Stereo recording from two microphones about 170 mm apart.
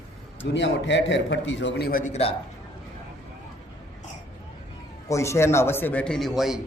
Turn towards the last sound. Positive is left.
turn(degrees=0)  # may be behind; listen again after turning